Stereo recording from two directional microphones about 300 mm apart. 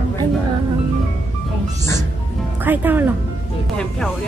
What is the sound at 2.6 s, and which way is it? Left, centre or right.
Speech, centre.